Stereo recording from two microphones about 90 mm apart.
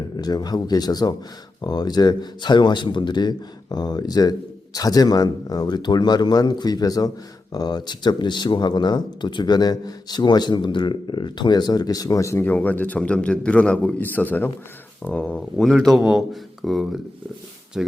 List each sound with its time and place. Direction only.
0.2 s speech: 45° left (ahead or behind)
12.5 s a man's voice: 20° left (ahead or behind)
15.5 s speech: centre (ahead or behind)